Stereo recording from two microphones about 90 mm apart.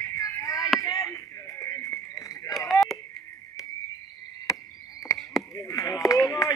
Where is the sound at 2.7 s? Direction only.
Centre (ahead or behind).